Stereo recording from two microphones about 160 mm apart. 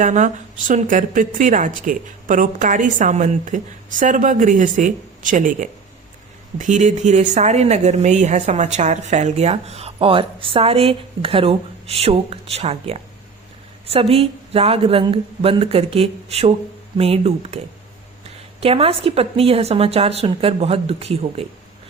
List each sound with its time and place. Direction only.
0.0 s a woman's voice: 50° right (ahead or behind)
18.6 s a woman's voice: 35° right (ahead or behind)